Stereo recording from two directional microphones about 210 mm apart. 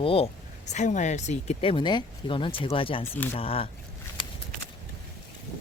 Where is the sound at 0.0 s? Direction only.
25° left (ahead or behind).